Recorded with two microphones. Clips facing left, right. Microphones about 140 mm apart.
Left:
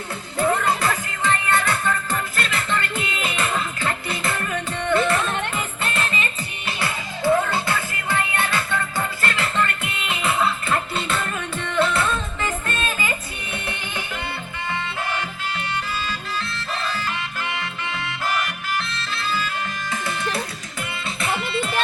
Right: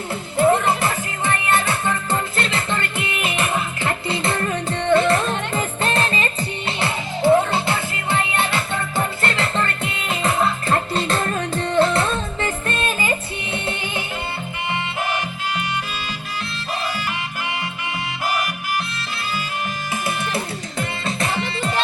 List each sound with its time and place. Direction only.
0.3 s music: 25° right (ahead or behind)
19.9 s music: 20° right (ahead or behind)
20.7 s music: 40° right (ahead or behind)